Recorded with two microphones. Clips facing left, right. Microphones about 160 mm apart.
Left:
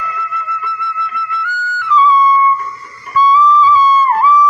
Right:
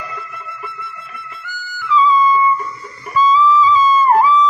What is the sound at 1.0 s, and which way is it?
Music, 65° left (ahead or behind).